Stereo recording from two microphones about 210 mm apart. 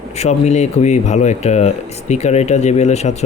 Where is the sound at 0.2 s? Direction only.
35° left (ahead or behind).